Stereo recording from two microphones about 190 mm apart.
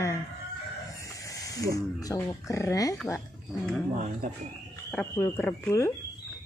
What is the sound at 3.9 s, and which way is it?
Speech, 40° right (ahead or behind).